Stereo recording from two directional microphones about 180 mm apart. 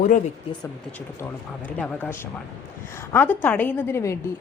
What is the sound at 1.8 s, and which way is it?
A woman's voice, 5° left (ahead or behind).